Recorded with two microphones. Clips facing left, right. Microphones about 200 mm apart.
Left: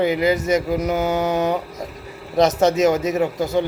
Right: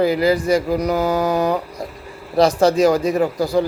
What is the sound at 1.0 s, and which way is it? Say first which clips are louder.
Mantra: right 2 dB; 35° right (ahead or behind).